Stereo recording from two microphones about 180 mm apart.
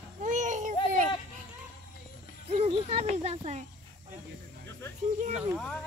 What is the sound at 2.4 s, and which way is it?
Speech, 35° right (ahead or behind).